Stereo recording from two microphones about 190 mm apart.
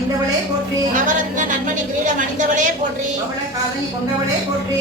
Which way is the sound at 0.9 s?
40° right (ahead or behind).